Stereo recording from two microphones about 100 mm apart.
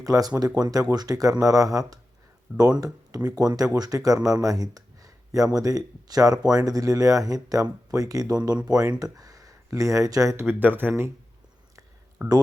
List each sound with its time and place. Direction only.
0.0 s speech: 35° right (ahead or behind)
10.4 s speech: 20° right (ahead or behind)
12.2 s speech: 30° right (ahead or behind)